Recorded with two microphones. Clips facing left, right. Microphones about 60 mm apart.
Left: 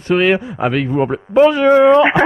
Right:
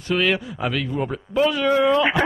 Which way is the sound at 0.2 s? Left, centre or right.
Left.